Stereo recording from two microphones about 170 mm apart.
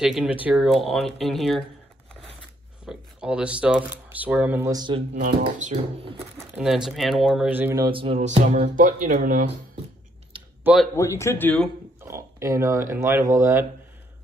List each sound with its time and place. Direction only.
0.0 s speech: 5° right (ahead or behind)
2.8 s speech: 5° right (ahead or behind); by 5.0 s 25° right (ahead or behind)
5.1 s speech: 45° right (ahead or behind)
6.3 s speech: 5° right (ahead or behind)
7.8 s speech: 30° right (ahead or behind); by 9.5 s 50° right (ahead or behind)
10.6 s speech: 5° right (ahead or behind)
11.0 s speech: 15° left (ahead or behind)
12.0 s speech: 15° right (ahead or behind)